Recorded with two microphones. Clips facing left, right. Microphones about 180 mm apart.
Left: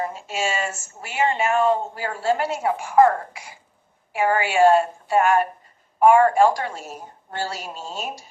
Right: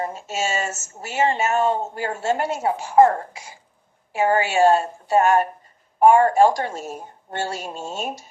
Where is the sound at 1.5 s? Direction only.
25° right (ahead or behind).